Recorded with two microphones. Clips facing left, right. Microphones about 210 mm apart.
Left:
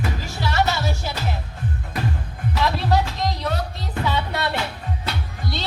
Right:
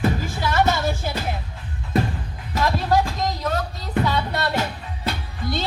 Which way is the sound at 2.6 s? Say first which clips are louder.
Right 2 dB; 45° right (ahead or behind).